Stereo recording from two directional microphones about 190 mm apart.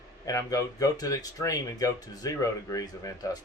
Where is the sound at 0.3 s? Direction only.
20° left (ahead or behind).